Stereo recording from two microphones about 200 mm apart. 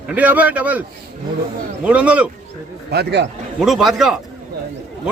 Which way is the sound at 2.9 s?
55° right (ahead or behind).